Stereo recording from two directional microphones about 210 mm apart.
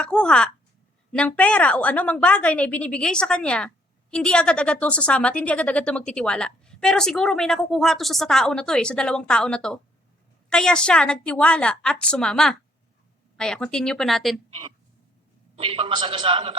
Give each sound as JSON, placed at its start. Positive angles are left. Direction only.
{"t": 0.0, "sound": "a woman's voice", "side_deg": 5}
{"t": 15.5, "sound": "a man's voice", "side_deg": -25}